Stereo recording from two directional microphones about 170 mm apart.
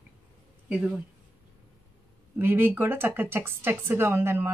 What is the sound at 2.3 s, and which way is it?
Speech, 10° right (ahead or behind).